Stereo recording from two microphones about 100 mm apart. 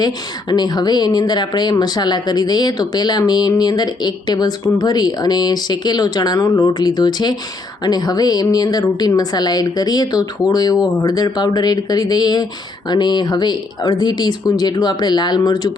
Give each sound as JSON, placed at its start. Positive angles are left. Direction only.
{"t": 0.0, "sound": "a woman's voice", "side_deg": 45}